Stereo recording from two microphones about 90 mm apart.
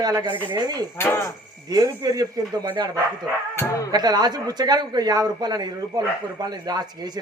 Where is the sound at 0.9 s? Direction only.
25° left (ahead or behind).